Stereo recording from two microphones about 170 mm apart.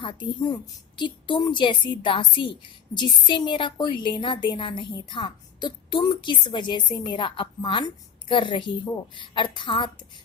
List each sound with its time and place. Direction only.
0.0 s a woman's voice: 30° left (ahead or behind)